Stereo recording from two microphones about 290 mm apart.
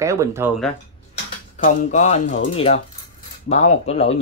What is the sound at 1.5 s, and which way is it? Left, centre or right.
Speech, left.